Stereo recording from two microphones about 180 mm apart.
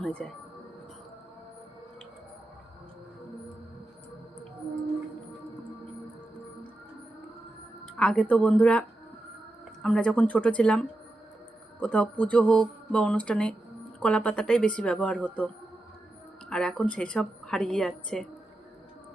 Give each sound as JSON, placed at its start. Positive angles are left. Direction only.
{"t": 0.0, "sound": "speech", "side_deg": 5}
{"t": 7.9, "sound": "speech", "side_deg": 5}
{"t": 9.8, "sound": "speech", "side_deg": 5}
{"t": 16.5, "sound": "speech", "side_deg": 5}